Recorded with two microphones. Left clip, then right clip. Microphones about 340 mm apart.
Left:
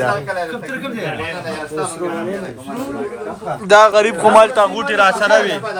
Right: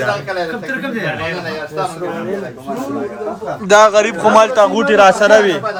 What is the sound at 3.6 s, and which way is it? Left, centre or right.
Speech, centre.